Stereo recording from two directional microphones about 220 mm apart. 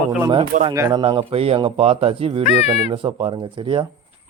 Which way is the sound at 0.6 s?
15° right (ahead or behind).